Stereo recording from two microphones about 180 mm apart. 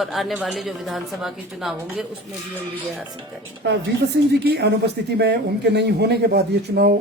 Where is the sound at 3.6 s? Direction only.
70° right (ahead or behind).